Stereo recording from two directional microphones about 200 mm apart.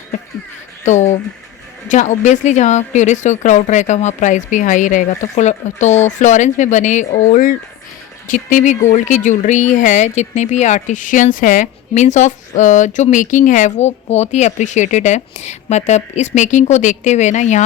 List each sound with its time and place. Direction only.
0.9 s speech: 35° left (ahead or behind)